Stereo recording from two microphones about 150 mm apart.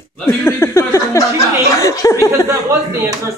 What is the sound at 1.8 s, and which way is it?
Speech, 20° left (ahead or behind).